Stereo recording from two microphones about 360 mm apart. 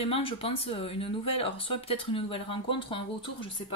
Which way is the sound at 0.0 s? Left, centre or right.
Centre.